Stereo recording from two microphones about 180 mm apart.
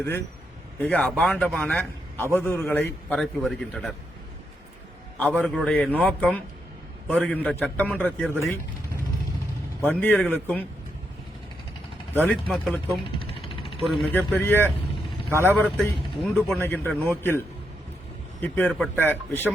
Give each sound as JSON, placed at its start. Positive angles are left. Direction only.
{"t": 0.8, "sound": "speech", "side_deg": 10}
{"t": 3.2, "sound": "a man's voice", "side_deg": 5}
{"t": 5.4, "sound": "a man's voice", "side_deg": 5}
{"t": 9.8, "sound": "speech", "side_deg": 10}
{"t": 12.2, "sound": "a man's voice", "side_deg": 0}
{"t": 13.1, "sound": "vehicle", "side_deg": 30}
{"t": 13.8, "sound": "a man's voice", "side_deg": 0}
{"t": 14.3, "sound": "speech", "side_deg": 10}
{"t": 15.3, "sound": "a man's voice", "side_deg": -10}
{"t": 15.5, "sound": "speech", "side_deg": 10}
{"t": 18.4, "sound": "speech", "side_deg": 10}